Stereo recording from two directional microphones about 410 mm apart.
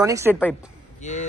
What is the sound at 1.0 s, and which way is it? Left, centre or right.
Speech, centre.